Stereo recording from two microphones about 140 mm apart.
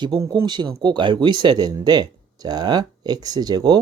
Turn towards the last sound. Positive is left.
turn(degrees=-30)  # may be behind; listen again after turning